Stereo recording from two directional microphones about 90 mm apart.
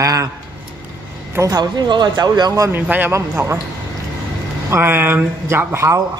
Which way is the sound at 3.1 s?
30° right (ahead or behind).